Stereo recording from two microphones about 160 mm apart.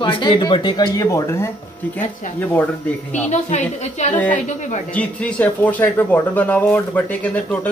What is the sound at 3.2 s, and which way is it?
Speech, 50° left (ahead or behind).